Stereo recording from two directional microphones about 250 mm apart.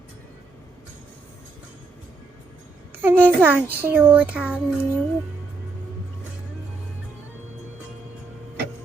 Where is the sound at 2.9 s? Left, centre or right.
Centre.